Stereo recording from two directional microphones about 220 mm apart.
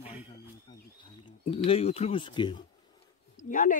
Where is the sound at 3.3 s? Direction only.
40° left (ahead or behind).